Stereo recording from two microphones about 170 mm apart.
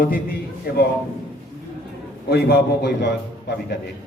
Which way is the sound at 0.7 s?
65° left (ahead or behind).